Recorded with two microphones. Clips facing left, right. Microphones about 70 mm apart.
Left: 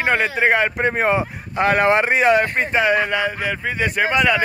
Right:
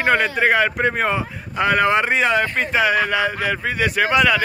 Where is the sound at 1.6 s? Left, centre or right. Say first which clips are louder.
Left 1 dB; left.